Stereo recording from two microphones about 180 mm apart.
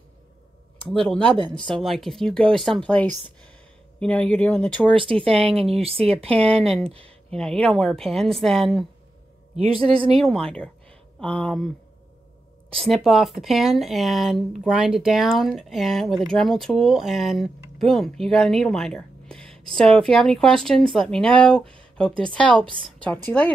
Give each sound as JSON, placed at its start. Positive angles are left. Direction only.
{"t": 0.8, "sound": "speech", "side_deg": 5}
{"t": 4.9, "sound": "speech", "side_deg": -30}
{"t": 6.9, "sound": "a sound", "side_deg": -30}
{"t": 7.3, "sound": "speech", "side_deg": 5}
{"t": 9.6, "sound": "speech", "side_deg": -30}
{"t": 10.1, "sound": "speech", "side_deg": 5}
{"t": 12.7, "sound": "speech", "side_deg": 0}